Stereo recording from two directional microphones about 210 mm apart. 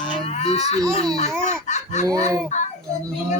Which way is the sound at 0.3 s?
30° left (ahead or behind).